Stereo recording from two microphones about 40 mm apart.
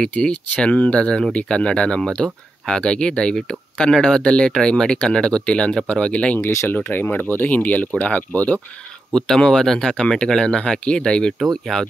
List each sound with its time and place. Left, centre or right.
0.0 s speech: left
6.3 s speech: left
7.3 s speech: left
9.1 s speech: centre
11.3 s speech: centre